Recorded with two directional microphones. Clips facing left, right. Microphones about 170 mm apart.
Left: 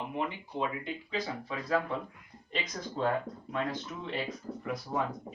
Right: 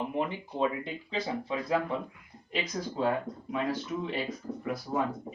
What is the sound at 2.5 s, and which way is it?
Speech, 5° right (ahead or behind).